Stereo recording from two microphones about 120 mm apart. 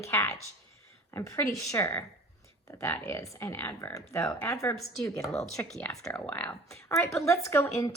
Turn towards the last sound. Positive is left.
turn(degrees=25)  # may be behind; listen again after turning